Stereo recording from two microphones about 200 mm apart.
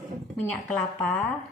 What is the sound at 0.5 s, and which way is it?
Speech, 5° left (ahead or behind).